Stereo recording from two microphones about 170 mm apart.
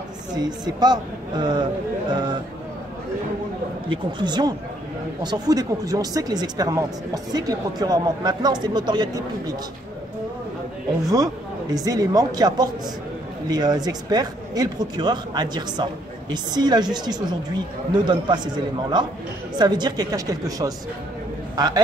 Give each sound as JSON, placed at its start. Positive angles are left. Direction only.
{"t": 0.3, "sound": "speech", "side_deg": -25}
{"t": 3.9, "sound": "speech", "side_deg": -25}
{"t": 11.7, "sound": "speech", "side_deg": -20}